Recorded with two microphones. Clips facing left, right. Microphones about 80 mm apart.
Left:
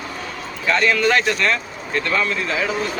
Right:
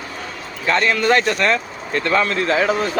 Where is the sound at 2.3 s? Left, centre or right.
Right.